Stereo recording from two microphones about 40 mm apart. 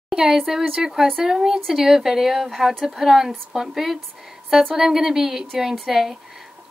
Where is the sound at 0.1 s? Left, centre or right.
Centre.